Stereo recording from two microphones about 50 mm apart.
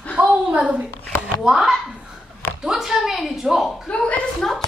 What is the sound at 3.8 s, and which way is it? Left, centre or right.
Speech, left.